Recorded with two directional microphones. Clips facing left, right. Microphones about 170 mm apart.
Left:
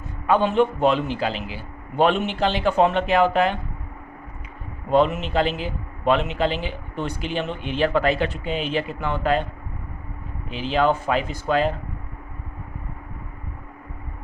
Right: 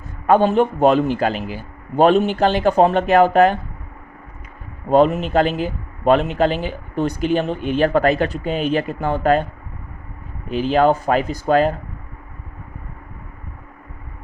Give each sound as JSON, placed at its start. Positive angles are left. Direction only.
{"t": 0.3, "sound": "a man's voice", "side_deg": -45}
{"t": 4.9, "sound": "a man's voice", "side_deg": -45}
{"t": 10.5, "sound": "a man's voice", "side_deg": -45}